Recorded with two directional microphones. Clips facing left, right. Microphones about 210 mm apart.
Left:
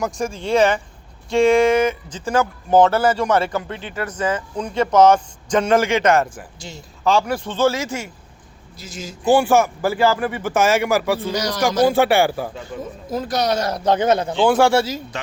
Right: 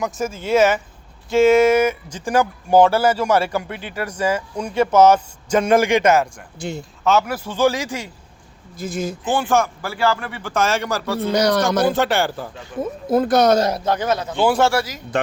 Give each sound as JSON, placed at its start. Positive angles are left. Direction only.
{"t": 0.0, "sound": "speech", "side_deg": -5}
{"t": 6.6, "sound": "speech", "side_deg": -60}
{"t": 7.0, "sound": "speech", "side_deg": -5}
{"t": 8.8, "sound": "speech", "side_deg": -55}
{"t": 9.3, "sound": "speech", "side_deg": 15}
{"t": 11.3, "sound": "speech", "side_deg": -60}
{"t": 11.9, "sound": "speech", "side_deg": 10}
{"t": 13.1, "sound": "speech", "side_deg": -55}
{"t": 13.8, "sound": "a man's voice", "side_deg": 25}